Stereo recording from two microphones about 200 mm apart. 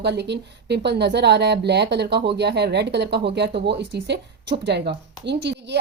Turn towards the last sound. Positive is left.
turn(degrees=-60)  # may be behind; listen again after turning